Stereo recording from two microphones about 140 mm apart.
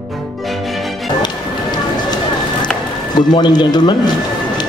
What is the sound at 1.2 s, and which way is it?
Music, 30° left (ahead or behind).